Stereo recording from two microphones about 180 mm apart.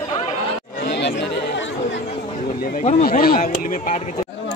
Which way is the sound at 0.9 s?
75° left (ahead or behind).